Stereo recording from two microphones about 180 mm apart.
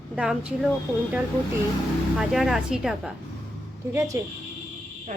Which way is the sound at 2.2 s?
Centre (ahead or behind).